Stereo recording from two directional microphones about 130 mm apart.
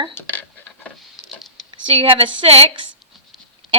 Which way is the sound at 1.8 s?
40° right (ahead or behind).